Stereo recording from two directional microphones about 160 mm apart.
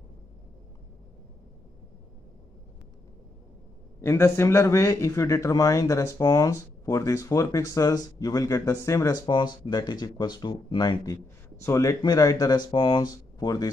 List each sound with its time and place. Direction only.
4.0 s a man's voice: 15° left (ahead or behind)